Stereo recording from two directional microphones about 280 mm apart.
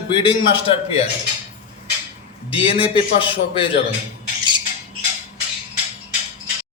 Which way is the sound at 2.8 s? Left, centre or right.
Centre.